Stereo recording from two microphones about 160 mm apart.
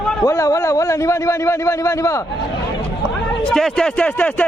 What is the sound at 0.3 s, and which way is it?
Speech, 20° left (ahead or behind).